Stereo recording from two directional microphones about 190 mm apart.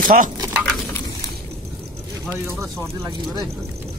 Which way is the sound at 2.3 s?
10° right (ahead or behind).